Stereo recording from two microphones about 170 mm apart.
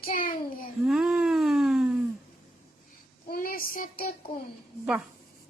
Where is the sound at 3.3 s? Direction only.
60° left (ahead or behind).